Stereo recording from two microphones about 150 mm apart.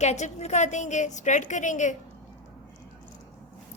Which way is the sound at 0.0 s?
50° left (ahead or behind).